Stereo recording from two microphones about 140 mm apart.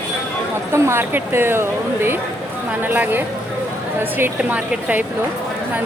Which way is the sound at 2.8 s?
15° right (ahead or behind).